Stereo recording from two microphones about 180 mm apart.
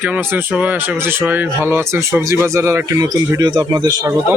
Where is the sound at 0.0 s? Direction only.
10° right (ahead or behind).